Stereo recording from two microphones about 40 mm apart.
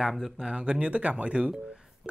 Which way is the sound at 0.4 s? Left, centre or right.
Right.